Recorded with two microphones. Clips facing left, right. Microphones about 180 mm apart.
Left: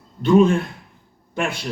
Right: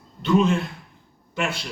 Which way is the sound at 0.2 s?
50° left (ahead or behind).